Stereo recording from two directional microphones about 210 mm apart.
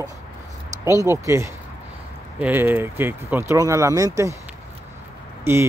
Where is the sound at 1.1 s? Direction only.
15° right (ahead or behind).